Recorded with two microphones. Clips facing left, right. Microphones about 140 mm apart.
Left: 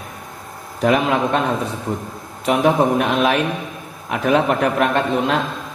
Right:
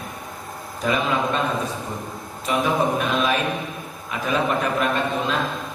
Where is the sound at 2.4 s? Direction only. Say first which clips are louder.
Left 6 dB; 65° left (ahead or behind).